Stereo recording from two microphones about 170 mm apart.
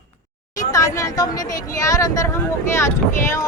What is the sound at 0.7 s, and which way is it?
A woman's voice, 20° left (ahead or behind).